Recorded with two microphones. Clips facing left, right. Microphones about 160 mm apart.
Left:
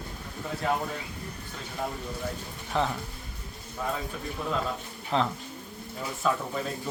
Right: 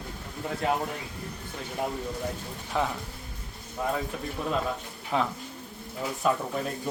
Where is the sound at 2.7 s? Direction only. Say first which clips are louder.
Left 1 dB; 10° right (ahead or behind).